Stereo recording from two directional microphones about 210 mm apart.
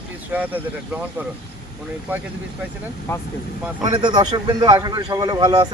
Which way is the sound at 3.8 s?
20° right (ahead or behind).